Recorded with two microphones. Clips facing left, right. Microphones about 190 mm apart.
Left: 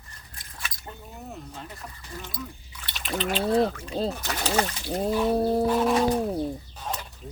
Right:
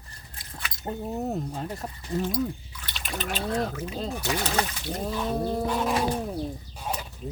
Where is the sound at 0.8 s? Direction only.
40° right (ahead or behind).